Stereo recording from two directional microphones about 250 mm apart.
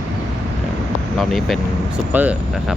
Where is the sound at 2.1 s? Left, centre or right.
Centre.